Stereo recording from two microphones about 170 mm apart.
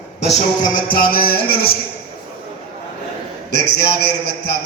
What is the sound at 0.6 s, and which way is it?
A man's voice, 55° left (ahead or behind).